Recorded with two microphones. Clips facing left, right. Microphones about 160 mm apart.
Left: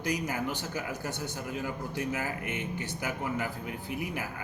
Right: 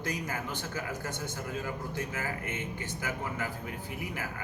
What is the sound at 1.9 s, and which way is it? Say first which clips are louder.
Speech: left 3 dB; 15° left (ahead or behind).